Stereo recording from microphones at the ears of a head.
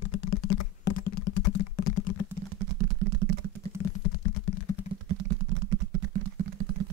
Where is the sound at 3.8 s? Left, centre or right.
Left.